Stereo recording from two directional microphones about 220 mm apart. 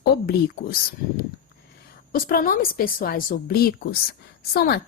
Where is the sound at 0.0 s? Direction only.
45° left (ahead or behind).